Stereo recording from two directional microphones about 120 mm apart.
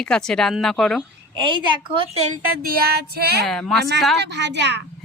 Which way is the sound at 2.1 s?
65° right (ahead or behind).